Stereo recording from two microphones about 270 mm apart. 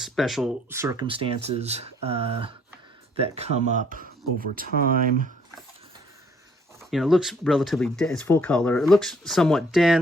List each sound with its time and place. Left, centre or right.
0.0 s speech: centre; by 5.3 s right
6.9 s speech: centre